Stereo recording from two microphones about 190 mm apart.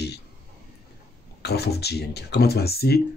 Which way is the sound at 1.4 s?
60° left (ahead or behind).